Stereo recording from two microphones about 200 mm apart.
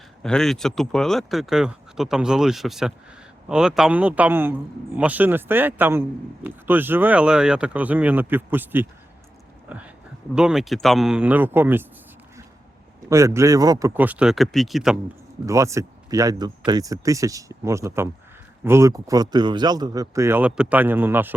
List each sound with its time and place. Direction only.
0.2 s a man's voice: 5° left (ahead or behind)
13.1 s a man's voice: 15° right (ahead or behind)
15.4 s a man's voice: 15° right (ahead or behind)